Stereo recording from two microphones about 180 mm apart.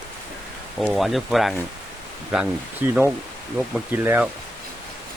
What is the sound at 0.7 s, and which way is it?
Speech, centre (ahead or behind).